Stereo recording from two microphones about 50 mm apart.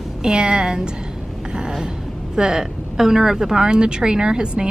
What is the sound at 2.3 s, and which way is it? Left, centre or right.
Speech, centre.